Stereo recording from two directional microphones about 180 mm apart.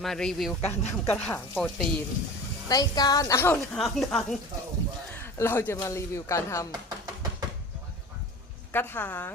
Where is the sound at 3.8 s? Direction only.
Centre (ahead or behind).